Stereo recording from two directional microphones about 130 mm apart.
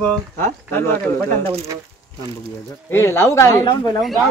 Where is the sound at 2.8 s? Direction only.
20° left (ahead or behind).